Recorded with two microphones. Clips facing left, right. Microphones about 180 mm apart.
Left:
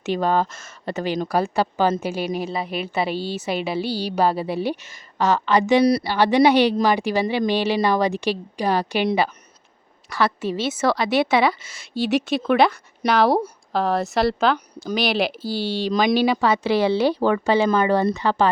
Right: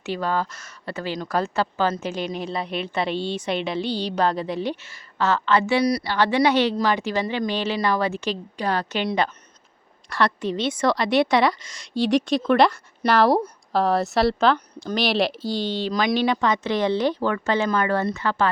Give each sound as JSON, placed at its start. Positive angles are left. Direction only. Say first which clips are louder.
{"t": 0.0, "sound": "speech", "louder": "left 4 dB", "side_deg": 20}
{"t": 15.9, "sound": "speech", "louder": "left 5 dB", "side_deg": 20}
{"t": 16.1, "sound": "speech", "louder": "left 2 dB", "side_deg": 5}